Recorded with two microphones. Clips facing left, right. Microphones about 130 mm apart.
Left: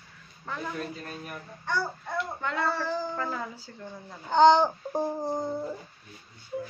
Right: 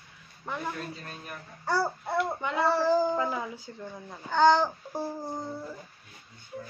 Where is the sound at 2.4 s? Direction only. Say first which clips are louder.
Right 2 dB; 15° right (ahead or behind).